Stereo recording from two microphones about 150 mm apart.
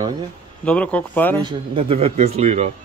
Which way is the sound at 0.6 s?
10° left (ahead or behind).